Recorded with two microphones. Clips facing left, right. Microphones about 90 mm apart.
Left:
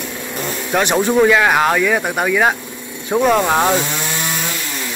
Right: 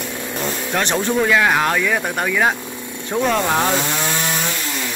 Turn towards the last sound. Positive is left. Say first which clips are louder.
# left 4 dB
turn(degrees=10)  # may be behind; listen again after turning